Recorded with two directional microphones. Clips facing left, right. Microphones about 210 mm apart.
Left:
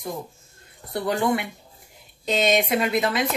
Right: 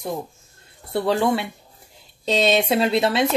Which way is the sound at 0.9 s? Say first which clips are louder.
Right 3 dB; 30° right (ahead or behind).